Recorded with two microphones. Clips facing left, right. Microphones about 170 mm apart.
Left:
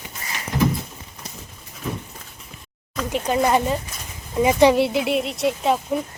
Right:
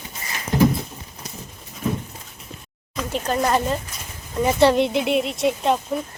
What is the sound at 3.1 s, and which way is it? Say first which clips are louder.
Speech: left 2 dB; 10° left (ahead or behind).